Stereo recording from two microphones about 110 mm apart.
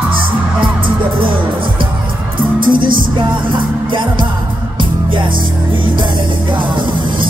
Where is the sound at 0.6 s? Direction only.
50° right (ahead or behind).